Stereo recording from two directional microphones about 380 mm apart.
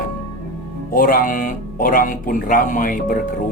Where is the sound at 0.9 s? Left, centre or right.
Left.